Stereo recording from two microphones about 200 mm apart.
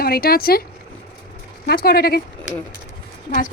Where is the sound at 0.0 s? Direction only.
50° left (ahead or behind).